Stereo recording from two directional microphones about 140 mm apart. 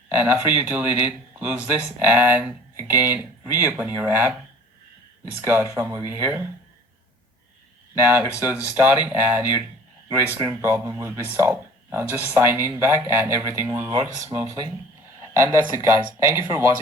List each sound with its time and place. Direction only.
0.2 s speech: 15° right (ahead or behind)
5.4 s speech: 15° right (ahead or behind)
7.9 s speech: 15° right (ahead or behind)